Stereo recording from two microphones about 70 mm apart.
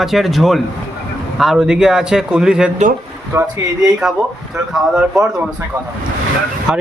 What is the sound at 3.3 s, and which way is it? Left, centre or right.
Speech, right.